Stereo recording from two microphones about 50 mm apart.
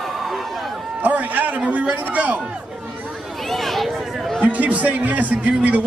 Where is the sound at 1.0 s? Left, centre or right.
Right.